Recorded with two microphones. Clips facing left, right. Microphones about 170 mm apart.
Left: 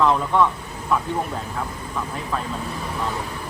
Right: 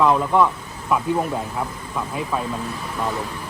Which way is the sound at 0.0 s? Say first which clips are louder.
Right 2 dB; 10° right (ahead or behind).